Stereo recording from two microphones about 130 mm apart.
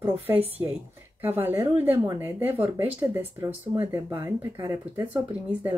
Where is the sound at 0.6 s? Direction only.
25° right (ahead or behind).